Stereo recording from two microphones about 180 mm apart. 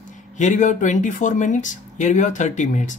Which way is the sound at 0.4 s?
45° left (ahead or behind).